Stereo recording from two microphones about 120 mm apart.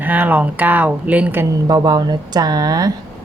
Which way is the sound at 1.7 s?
35° right (ahead or behind).